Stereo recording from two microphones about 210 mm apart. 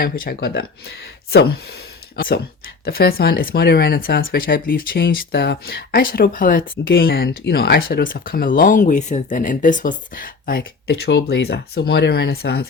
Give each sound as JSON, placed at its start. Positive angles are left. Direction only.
{"t": 0.0, "sound": "speech", "side_deg": 45}